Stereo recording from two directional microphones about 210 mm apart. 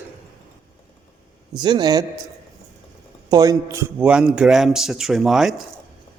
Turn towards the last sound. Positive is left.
turn(degrees=0)  # may be behind; listen again after turning